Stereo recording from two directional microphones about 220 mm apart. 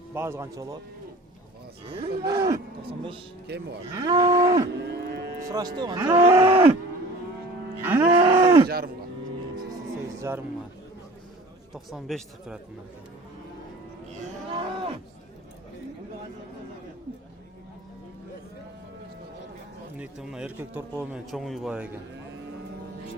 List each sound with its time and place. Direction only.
0.1 s cattle: 10° right (ahead or behind)
2.0 s cattle: 20° right (ahead or behind)
3.4 s speech: 50° right (ahead or behind)
3.9 s cattle: 15° right (ahead or behind)
4.8 s cattle: 50° right (ahead or behind)
5.5 s cattle: 15° right (ahead or behind)
5.8 s speech: 15° right (ahead or behind)
7.8 s music: 10° right (ahead or behind)
8.1 s a sound: 20° right (ahead or behind)
8.6 s speech: 45° right (ahead or behind)
10.2 s speech: 10° right (ahead or behind)
11.7 s speech: centre (ahead or behind)
20.0 s speech: 5° right (ahead or behind)